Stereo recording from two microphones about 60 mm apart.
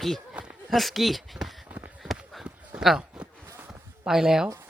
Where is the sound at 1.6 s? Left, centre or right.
Right.